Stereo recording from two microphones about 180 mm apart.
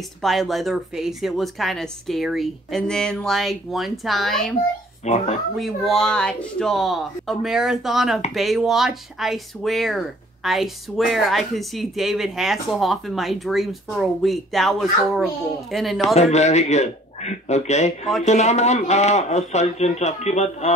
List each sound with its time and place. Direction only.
0.2 s speech: centre (ahead or behind)
5.0 s speech: 40° left (ahead or behind)
5.6 s speech: centre (ahead or behind)
16.2 s speech: 40° left (ahead or behind)